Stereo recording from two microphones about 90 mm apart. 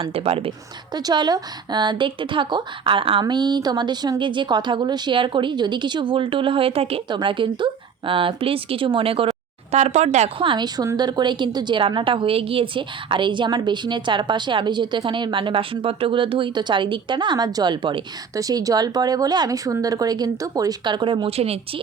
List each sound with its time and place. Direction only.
0.0 s speech: 90° right
0.9 s a woman's voice: 50° right (ahead or behind); by 3.2 s 80° right
3.2 s speech: 55° right (ahead or behind)
4.2 s a woman's voice: 60° right (ahead or behind)
8.4 s a woman's voice: 90° right
10.9 s a woman's voice: 55° right (ahead or behind)
18.3 s speech: 40° right (ahead or behind); by 21.6 s 90° right